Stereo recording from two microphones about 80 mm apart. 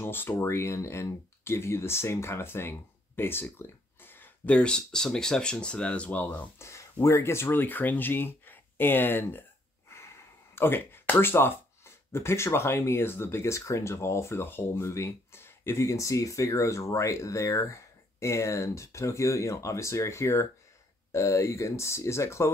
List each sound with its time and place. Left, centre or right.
0.0 s speech: left
3.5 s a sound: left
4.6 s speech: centre
6.6 s speech: left
10.5 s speech: left